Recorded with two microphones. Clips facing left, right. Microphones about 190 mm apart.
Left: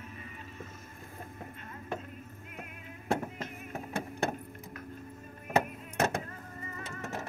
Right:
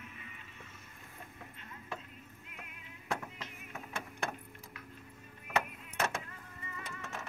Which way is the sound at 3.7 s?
35° left (ahead or behind).